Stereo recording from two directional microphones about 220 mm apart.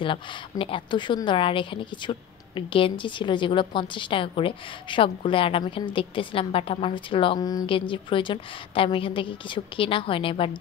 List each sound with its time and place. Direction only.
0.0 s a woman's voice: 25° left (ahead or behind)